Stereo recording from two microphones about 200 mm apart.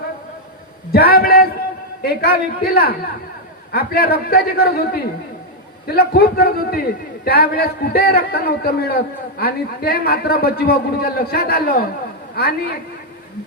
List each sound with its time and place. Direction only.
0.9 s a man's voice: 50° left (ahead or behind)